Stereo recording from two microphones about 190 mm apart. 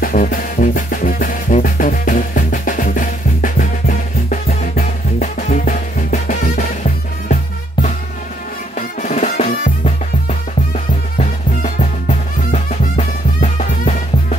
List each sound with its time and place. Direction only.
0.0 s music: 45° left (ahead or behind)
8.7 s music: 40° left (ahead or behind)